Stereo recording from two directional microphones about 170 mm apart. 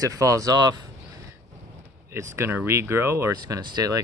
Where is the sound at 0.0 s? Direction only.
20° right (ahead or behind).